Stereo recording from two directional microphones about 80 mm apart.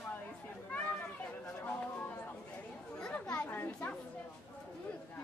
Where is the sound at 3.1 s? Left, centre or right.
Centre.